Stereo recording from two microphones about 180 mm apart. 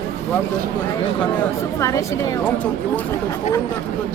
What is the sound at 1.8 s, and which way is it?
Speech, 15° left (ahead or behind).